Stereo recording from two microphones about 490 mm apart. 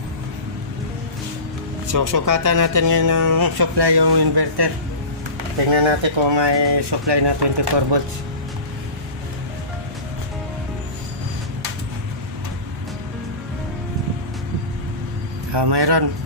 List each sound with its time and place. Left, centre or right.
1.9 s speech: right
5.7 s speech: right
15.5 s a man's voice: right